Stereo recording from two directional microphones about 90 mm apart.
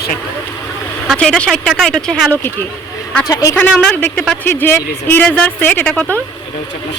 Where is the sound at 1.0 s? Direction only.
5° left (ahead or behind).